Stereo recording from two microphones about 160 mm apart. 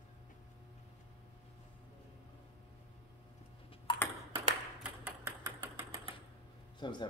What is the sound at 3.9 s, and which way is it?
Ping, 30° left (ahead or behind).